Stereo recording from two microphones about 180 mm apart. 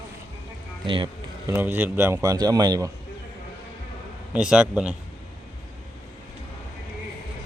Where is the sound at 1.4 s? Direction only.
10° right (ahead or behind).